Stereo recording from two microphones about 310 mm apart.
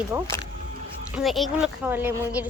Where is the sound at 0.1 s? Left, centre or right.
Centre.